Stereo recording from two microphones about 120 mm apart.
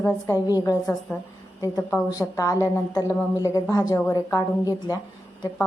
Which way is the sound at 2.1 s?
30° left (ahead or behind).